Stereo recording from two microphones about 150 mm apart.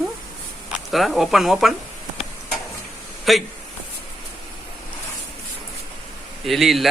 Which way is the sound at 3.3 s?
Centre (ahead or behind).